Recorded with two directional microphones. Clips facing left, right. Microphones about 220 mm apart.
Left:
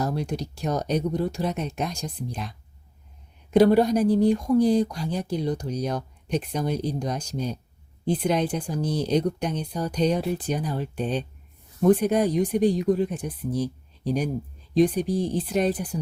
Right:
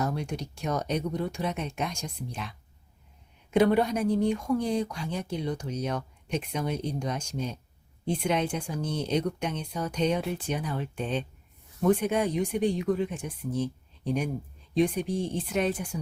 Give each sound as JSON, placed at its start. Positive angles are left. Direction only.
{"t": 0.0, "sound": "speech", "side_deg": 35}